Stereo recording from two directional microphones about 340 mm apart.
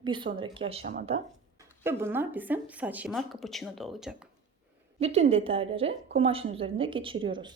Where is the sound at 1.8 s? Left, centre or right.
Centre.